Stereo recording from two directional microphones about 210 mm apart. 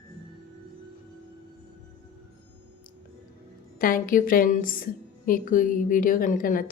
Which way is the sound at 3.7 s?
40° left (ahead or behind).